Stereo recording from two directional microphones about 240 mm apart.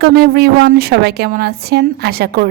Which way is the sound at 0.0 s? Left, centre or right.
Right.